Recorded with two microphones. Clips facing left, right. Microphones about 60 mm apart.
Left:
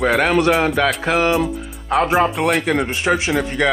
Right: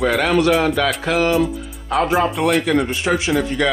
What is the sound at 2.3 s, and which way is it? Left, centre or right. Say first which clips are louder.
Speech: right 1 dB; centre.